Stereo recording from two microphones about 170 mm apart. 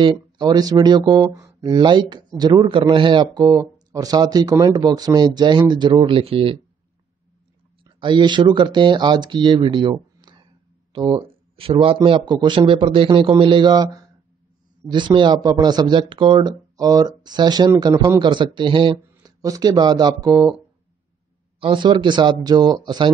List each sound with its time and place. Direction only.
0.0 s speech: 25° right (ahead or behind)
7.8 s speech: 30° right (ahead or behind)
21.5 s speech: 30° right (ahead or behind)